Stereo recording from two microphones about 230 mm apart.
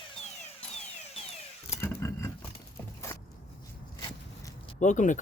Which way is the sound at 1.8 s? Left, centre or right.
Centre.